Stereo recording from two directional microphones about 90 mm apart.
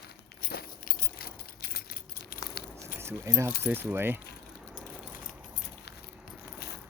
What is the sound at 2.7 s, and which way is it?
Speech, 30° right (ahead or behind).